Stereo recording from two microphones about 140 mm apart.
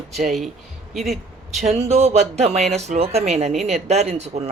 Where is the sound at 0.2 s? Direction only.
Centre (ahead or behind).